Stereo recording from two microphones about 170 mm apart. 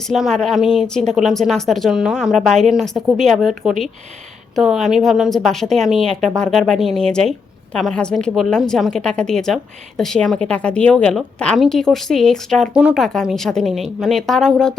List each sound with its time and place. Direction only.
0.1 s a woman's voice: centre (ahead or behind)
4.5 s a woman's voice: centre (ahead or behind)